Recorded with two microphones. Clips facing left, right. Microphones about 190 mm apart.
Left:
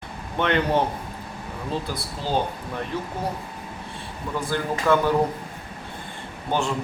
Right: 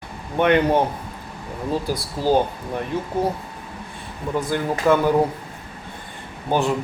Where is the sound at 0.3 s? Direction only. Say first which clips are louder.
Right 5 dB; 15° right (ahead or behind).